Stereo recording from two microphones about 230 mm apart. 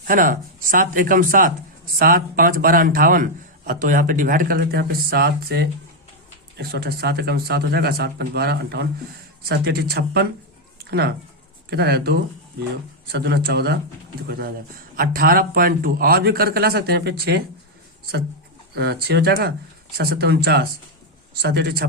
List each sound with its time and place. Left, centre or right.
0.1 s a man's voice: right
10.8 s a sound: right
11.7 s a man's voice: right
18.7 s speech: right